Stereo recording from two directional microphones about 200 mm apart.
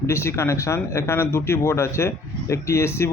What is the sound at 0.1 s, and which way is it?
Speech, 15° left (ahead or behind).